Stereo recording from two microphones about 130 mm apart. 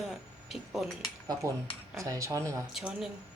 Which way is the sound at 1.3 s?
25° right (ahead or behind).